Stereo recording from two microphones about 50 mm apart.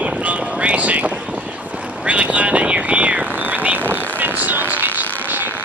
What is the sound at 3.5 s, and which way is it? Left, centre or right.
Vehicle, right.